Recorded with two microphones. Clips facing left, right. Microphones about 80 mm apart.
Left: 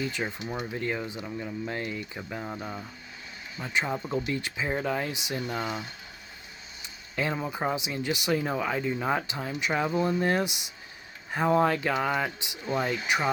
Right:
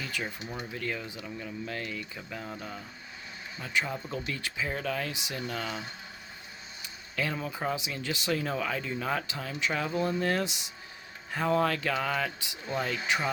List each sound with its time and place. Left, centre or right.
0.0 s speech: left
0.4 s speech: centre
0.7 s speech: left
6.8 s speech: left